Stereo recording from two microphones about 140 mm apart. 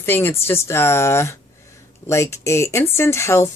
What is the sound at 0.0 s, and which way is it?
Speech, 15° left (ahead or behind).